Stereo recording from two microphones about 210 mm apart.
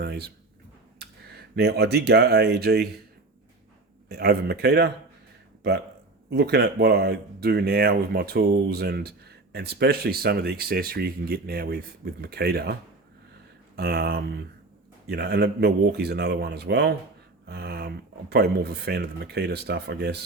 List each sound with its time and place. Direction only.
0.0 s speech: 50° right (ahead or behind)
1.5 s speech: 50° right (ahead or behind)
4.1 s speech: 50° right (ahead or behind)
6.3 s speech: 50° right (ahead or behind)
13.7 s speech: 50° right (ahead or behind)